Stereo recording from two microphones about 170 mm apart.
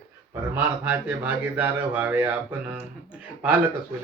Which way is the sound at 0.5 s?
10° right (ahead or behind).